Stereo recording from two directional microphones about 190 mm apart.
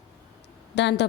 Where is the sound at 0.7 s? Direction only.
65° left (ahead or behind).